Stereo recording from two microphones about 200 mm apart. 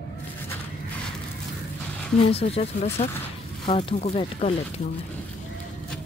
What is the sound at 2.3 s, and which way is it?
Speech, 30° left (ahead or behind).